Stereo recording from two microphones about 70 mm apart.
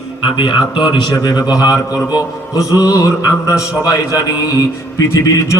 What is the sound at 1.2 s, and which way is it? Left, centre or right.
Speech, left.